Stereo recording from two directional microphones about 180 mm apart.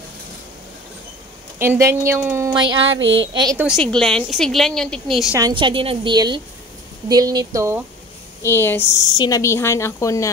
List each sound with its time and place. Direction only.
1.6 s a woman's voice: 15° right (ahead or behind)
3.0 s speech: 90° right
3.7 s a woman's voice: 5° left (ahead or behind)
5.5 s a woman's voice: 25° right (ahead or behind)
8.4 s a woman's voice: 15° left (ahead or behind)